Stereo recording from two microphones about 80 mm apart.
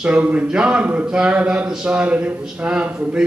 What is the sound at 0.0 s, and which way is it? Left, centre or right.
A man's voice, centre.